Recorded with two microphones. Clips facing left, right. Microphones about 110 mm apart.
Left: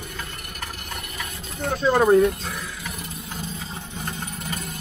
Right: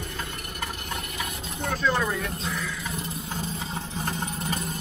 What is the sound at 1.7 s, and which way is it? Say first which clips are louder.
Speech: left 10 dB; 30° left (ahead or behind).